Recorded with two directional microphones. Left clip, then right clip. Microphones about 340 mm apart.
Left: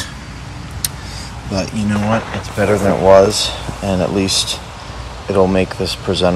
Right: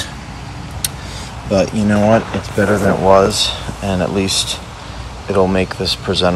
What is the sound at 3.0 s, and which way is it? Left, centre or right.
Speech, left.